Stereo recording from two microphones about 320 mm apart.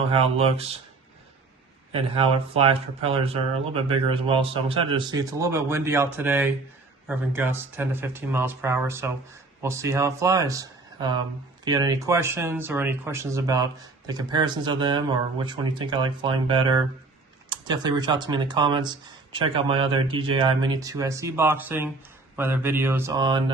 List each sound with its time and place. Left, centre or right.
0.1 s speech: centre
1.9 s speech: centre